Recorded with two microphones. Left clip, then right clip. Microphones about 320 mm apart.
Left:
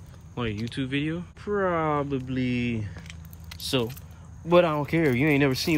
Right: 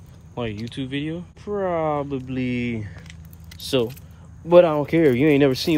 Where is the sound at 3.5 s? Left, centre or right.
Centre.